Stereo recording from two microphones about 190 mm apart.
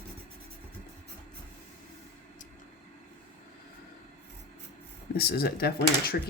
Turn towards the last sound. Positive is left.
turn(degrees=55)  # may be behind; listen again after turning